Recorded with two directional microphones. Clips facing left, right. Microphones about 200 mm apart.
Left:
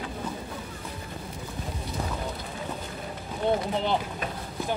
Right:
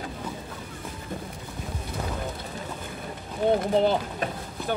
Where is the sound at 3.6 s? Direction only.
45° right (ahead or behind).